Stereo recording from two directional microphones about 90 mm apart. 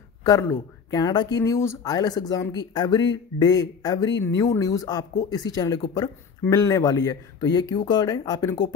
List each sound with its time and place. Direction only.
0.4 s a man's voice: 30° left (ahead or behind)
0.9 s speech: 50° left (ahead or behind)
1.4 s speech: 35° left (ahead or behind)
1.9 s speech: 45° left (ahead or behind)